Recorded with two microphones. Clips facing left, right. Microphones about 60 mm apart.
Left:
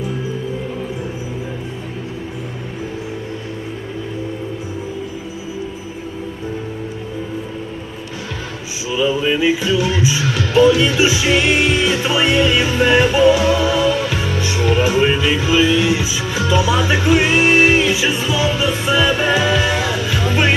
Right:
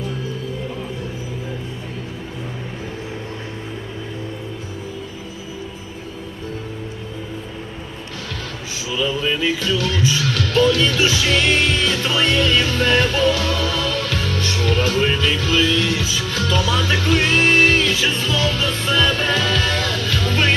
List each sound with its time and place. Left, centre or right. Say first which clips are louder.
8.9 s music: left 5 dB; centre